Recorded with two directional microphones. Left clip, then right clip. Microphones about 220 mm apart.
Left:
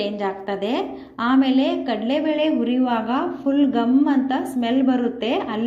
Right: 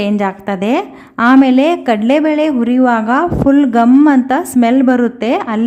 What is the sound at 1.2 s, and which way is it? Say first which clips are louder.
Speech: right 10 dB; 65° right (ahead or behind).